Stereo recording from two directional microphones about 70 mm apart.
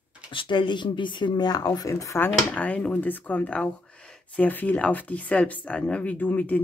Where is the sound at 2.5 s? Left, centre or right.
Left.